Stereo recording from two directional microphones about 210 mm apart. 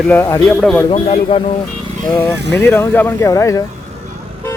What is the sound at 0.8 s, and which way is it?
Speech, 30° left (ahead or behind).